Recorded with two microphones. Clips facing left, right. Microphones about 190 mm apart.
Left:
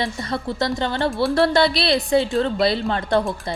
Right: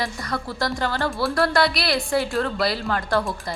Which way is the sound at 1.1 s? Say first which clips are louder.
Left 4 dB; centre (ahead or behind).